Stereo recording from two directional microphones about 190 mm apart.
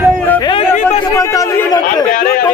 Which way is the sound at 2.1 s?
50° left (ahead or behind).